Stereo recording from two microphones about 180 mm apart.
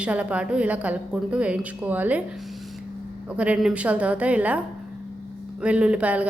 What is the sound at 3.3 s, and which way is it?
A woman's voice, 5° right (ahead or behind).